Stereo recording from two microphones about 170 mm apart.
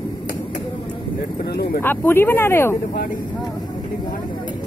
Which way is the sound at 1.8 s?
15° left (ahead or behind).